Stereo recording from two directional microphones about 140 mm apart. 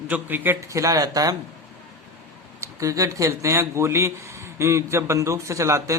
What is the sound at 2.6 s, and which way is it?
Speech, 25° right (ahead or behind).